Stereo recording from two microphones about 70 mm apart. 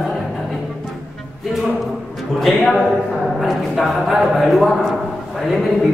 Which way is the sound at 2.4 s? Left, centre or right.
Centre.